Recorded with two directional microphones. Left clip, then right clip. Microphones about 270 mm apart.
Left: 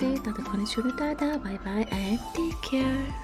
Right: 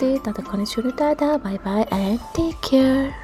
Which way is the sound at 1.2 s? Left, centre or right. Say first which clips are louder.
Right 9 dB; centre.